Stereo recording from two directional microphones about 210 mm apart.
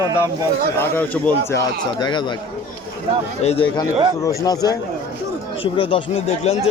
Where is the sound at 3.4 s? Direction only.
30° left (ahead or behind).